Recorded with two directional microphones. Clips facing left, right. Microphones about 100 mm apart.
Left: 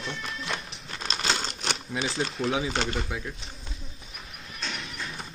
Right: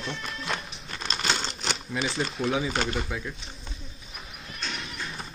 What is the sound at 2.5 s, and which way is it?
Speech, 20° left (ahead or behind).